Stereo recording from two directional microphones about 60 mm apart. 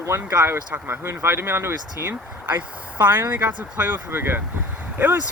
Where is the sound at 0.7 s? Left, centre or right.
Right.